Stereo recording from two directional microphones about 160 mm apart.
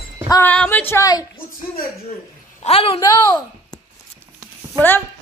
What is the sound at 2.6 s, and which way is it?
Speech, 35° left (ahead or behind).